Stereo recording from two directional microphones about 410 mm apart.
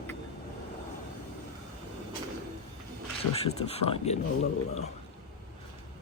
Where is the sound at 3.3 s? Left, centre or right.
Centre.